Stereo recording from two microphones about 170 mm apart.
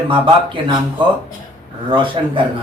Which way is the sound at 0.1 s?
30° right (ahead or behind).